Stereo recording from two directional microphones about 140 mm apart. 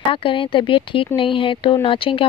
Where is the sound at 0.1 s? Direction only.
40° left (ahead or behind).